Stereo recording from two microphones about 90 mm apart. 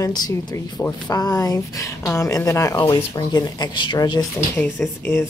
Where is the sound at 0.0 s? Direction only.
50° left (ahead or behind).